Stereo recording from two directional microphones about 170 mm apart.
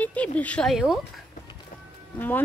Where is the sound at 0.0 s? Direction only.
10° left (ahead or behind).